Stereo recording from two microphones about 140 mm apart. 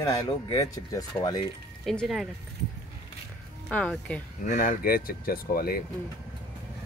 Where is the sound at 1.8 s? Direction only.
Centre (ahead or behind).